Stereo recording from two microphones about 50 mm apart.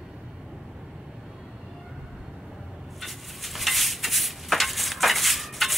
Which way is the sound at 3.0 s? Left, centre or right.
Centre.